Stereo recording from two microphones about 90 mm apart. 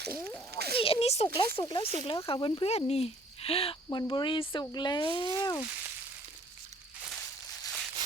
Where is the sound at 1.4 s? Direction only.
65° left (ahead or behind); by 2.3 s 90° left.